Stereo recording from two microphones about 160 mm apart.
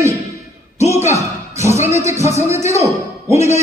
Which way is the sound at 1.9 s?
20° right (ahead or behind).